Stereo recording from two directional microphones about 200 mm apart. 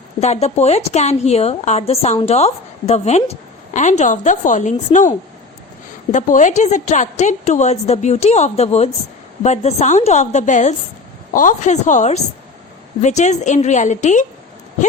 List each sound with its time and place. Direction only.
0.2 s a woman's voice: 30° left (ahead or behind)